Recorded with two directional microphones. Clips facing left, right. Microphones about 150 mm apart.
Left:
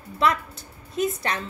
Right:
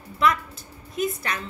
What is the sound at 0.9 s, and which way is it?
Speech, 30° left (ahead or behind).